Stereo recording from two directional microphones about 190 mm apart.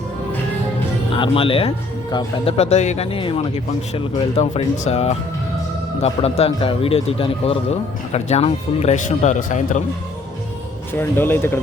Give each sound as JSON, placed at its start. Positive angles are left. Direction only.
{"t": 1.1, "sound": "a man's voice", "side_deg": 30}
{"t": 10.9, "sound": "speech", "side_deg": 10}